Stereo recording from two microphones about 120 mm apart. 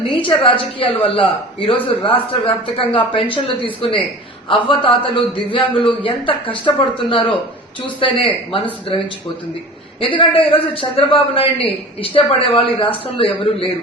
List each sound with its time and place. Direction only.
0.2 s a woman's voice: 45° left (ahead or behind)
10.0 s a woman's voice: 45° left (ahead or behind)